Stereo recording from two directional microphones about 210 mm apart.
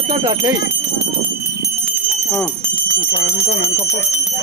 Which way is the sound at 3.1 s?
30° left (ahead or behind).